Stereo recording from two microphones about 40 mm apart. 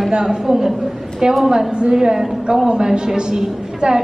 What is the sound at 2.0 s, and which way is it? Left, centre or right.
A woman's voice, centre.